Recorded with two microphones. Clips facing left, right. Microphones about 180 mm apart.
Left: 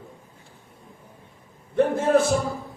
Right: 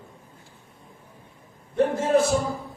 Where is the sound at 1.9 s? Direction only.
55° left (ahead or behind).